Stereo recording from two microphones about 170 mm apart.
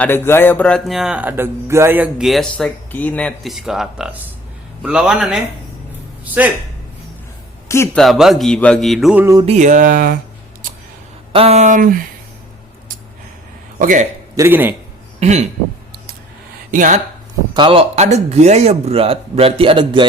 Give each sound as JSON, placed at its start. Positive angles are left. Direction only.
{"t": 0.0, "sound": "speech", "side_deg": 15}
{"t": 7.9, "sound": "speech", "side_deg": 0}
{"t": 9.2, "sound": "a sound", "side_deg": -20}
{"t": 9.5, "sound": "speech", "side_deg": -45}
{"t": 11.3, "sound": "speech", "side_deg": -35}
{"t": 13.7, "sound": "speech", "side_deg": -50}
{"t": 14.3, "sound": "a man's voice", "side_deg": -15}
{"t": 15.2, "sound": "speech", "side_deg": -40}
{"t": 16.7, "sound": "speech", "side_deg": -50}
{"t": 17.5, "sound": "speech", "side_deg": -30}